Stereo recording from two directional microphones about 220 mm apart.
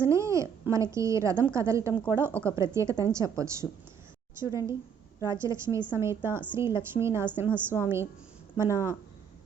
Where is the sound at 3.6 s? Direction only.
Centre (ahead or behind).